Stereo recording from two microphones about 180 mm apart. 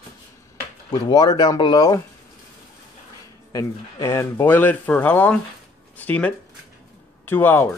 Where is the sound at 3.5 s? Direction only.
15° left (ahead or behind).